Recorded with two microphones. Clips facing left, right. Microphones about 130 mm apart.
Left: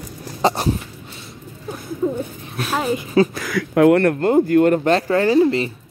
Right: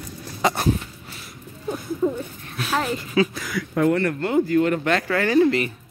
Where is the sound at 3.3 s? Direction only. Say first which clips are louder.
Left 6 dB; 80° left; by 4.1 s 60° left (ahead or behind).